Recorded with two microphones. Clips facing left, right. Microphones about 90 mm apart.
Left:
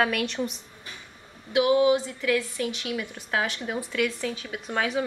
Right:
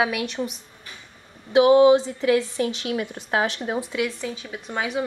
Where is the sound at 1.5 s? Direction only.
30° right (ahead or behind).